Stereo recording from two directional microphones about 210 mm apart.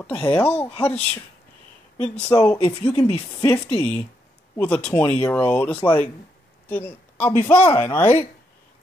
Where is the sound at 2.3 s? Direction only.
15° left (ahead or behind).